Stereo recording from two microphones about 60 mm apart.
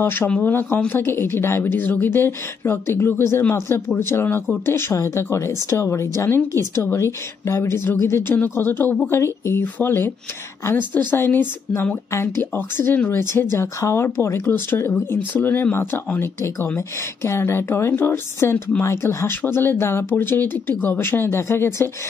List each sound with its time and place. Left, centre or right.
0.0 s a woman's voice: left
13.1 s a woman's voice: left
13.7 s a woman's voice: left
16.3 s a woman's voice: left